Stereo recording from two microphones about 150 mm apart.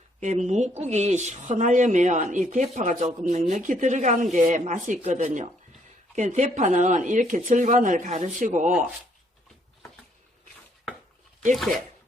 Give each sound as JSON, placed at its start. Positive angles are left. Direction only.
{"t": 0.2, "sound": "speech", "side_deg": -55}